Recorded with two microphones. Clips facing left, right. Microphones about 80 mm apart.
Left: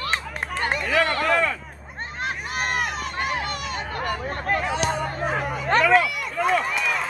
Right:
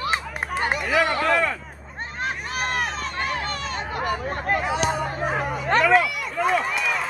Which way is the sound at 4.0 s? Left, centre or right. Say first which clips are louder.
Right 3 dB; centre.